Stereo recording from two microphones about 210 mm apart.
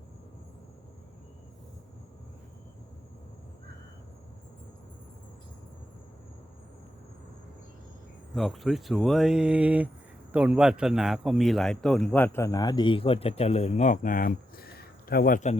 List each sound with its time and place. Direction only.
8.4 s a man's voice: centre (ahead or behind); by 15.5 s 40° left (ahead or behind)